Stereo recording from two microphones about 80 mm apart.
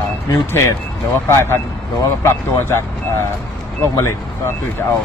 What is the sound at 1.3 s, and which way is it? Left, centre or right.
Speech, left.